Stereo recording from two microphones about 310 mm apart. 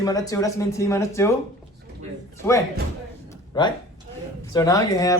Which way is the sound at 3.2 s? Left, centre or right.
Centre.